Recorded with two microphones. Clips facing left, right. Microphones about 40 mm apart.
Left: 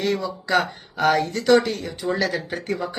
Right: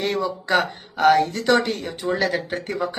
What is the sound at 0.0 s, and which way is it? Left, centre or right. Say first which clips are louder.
Speech: right 1 dB; right.